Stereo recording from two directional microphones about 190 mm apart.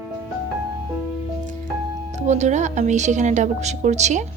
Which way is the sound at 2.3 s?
40° right (ahead or behind).